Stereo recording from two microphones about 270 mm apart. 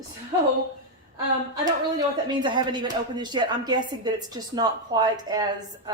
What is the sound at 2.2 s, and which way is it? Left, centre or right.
Speech, centre.